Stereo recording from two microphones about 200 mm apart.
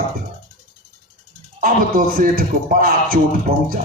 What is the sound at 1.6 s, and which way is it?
A man's voice, 45° right (ahead or behind).